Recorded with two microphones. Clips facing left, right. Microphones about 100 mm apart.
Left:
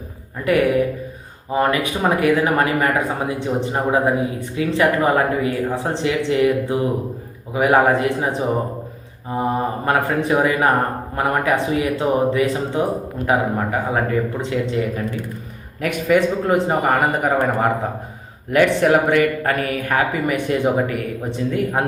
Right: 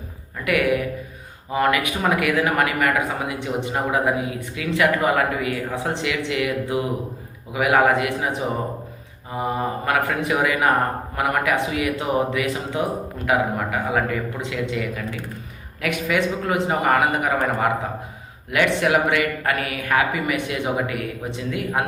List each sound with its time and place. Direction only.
1.5 s speech: 30° left (ahead or behind)